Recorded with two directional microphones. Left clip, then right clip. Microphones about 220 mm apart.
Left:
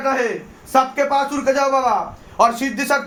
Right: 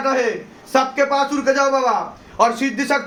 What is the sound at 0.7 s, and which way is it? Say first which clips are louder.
A man's voice: even; 30° left (ahead or behind).